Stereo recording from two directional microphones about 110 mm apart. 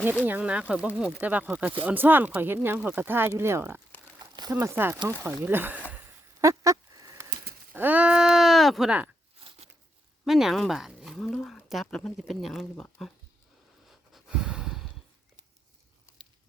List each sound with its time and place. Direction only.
0.3 s speech: 10° right (ahead or behind)
4.2 s crumpling: 35° right (ahead or behind)
4.6 s speech: 20° right (ahead or behind)
6.4 s a sound: 30° right (ahead or behind)
7.7 s speech: 15° right (ahead or behind); by 8.9 s centre (ahead or behind)
10.2 s speech: centre (ahead or behind)
13.8 s a sound: 5° right (ahead or behind)